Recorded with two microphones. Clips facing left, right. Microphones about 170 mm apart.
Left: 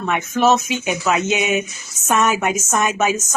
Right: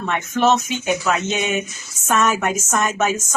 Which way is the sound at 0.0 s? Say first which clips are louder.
Left 1 dB; 5° left (ahead or behind).